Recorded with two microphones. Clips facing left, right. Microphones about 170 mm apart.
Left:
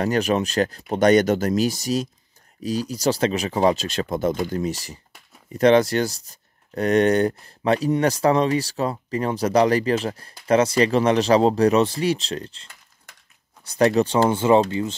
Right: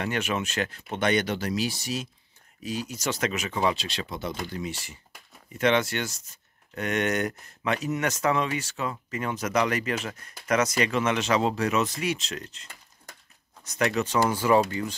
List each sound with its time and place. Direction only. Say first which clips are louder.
0.0 s speech: left 8 dB; 40° left (ahead or behind)
13.7 s speech: left 8 dB; 35° left (ahead or behind)